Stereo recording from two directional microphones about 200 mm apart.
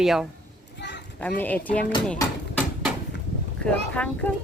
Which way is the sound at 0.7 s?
60° left (ahead or behind).